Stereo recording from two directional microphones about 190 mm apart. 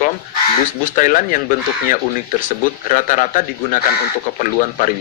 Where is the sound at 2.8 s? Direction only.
45° left (ahead or behind).